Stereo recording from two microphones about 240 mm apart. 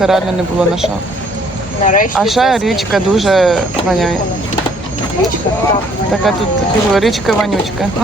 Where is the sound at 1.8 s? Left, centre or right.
Left.